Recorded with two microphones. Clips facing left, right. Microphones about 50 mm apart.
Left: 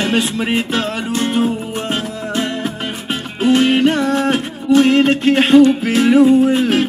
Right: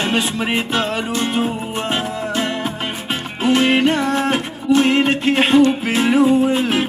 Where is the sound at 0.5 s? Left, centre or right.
Right.